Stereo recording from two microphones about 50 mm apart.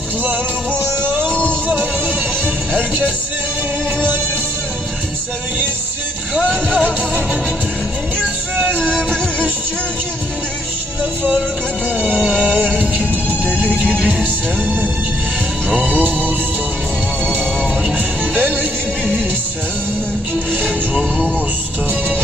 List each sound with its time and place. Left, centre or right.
1.3 s music: left
1.6 s music: right
6.3 s speech: centre
6.7 s music: right
8.5 s music: right
8.8 s music: left
12.4 s music: right
15.9 s music: right
17.9 s music: right